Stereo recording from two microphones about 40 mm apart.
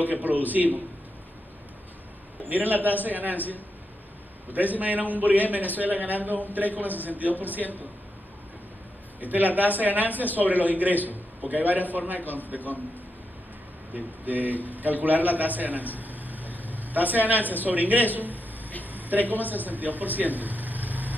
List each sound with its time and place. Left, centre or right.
0.0 s a man's voice: right
2.4 s a man's voice: right
4.5 s a man's voice: right
9.2 s a man's voice: right
13.9 s a man's voice: right
18.9 s a sound: right
19.5 s speech: right